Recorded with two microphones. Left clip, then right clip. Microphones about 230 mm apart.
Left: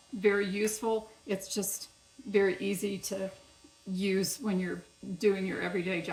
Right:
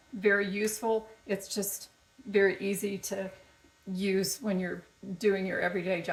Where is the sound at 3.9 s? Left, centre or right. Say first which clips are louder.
Right 1 dB; centre.